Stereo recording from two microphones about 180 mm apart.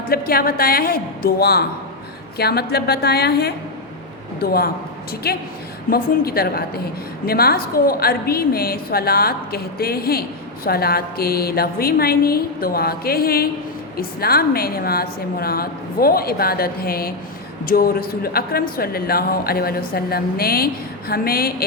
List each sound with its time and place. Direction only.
0.1 s a woman's voice: 55° left (ahead or behind)